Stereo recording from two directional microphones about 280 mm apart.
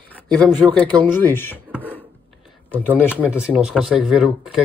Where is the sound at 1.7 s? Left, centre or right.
Centre.